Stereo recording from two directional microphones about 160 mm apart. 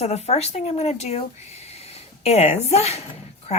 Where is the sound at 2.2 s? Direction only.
40° left (ahead or behind).